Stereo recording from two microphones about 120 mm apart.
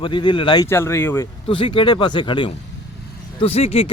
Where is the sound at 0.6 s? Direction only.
20° left (ahead or behind).